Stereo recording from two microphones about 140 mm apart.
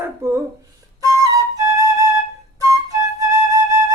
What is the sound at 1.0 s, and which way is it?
Flute, 25° right (ahead or behind).